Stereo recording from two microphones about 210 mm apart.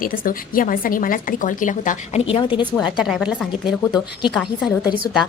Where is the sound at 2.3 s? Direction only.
25° left (ahead or behind).